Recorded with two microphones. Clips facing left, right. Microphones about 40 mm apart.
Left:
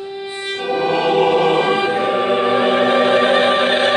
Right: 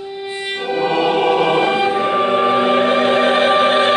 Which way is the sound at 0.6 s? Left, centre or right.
Centre.